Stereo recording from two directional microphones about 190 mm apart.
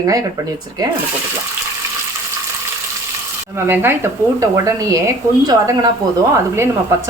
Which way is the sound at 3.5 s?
10° right (ahead or behind).